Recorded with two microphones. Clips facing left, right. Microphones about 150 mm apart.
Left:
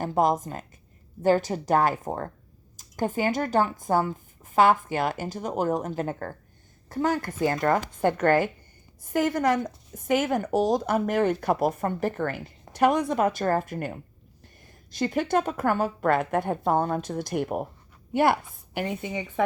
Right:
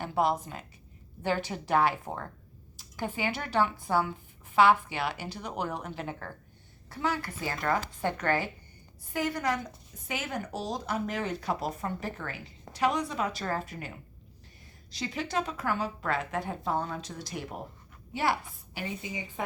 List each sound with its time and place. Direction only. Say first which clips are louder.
0.0 s a woman's voice: left 5 dB; 45° left (ahead or behind); by 19.2 s 60° left (ahead or behind)